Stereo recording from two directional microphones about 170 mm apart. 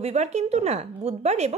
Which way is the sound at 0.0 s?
40° right (ahead or behind).